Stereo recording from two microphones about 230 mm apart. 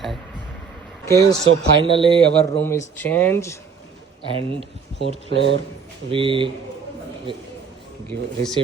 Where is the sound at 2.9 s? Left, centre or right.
Centre.